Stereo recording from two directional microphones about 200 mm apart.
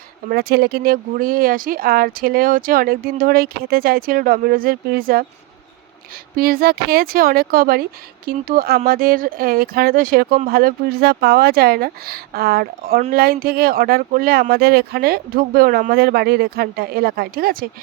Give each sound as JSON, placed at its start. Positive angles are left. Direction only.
{"t": 0.3, "sound": "speech", "side_deg": -55}
{"t": 6.3, "sound": "speech", "side_deg": -50}